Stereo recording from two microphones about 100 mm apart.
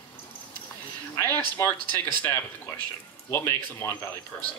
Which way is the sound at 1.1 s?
15° left (ahead or behind).